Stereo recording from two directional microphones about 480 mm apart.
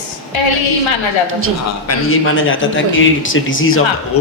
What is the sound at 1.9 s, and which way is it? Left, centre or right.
A man's voice, left.